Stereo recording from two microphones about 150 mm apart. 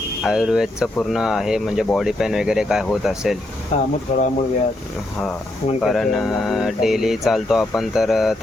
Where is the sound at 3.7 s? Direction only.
50° left (ahead or behind).